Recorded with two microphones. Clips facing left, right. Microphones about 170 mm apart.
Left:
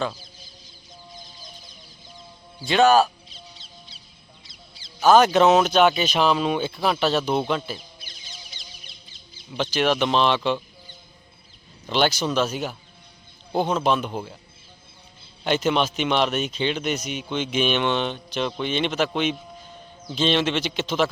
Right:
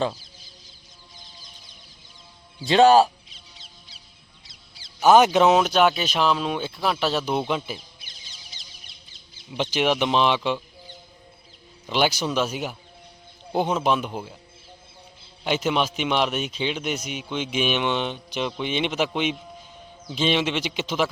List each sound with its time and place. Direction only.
2.6 s speech: 30° right (ahead or behind)
3.2 s duck: 35° left (ahead or behind)
4.9 s a man's voice: 15° right (ahead or behind)
9.5 s a man's voice: 15° right (ahead or behind)
11.9 s a man's voice: 10° right (ahead or behind)
15.4 s a man's voice: 5° right (ahead or behind)